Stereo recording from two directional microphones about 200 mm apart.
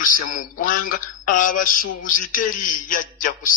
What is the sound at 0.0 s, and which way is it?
A man's voice, 40° left (ahead or behind).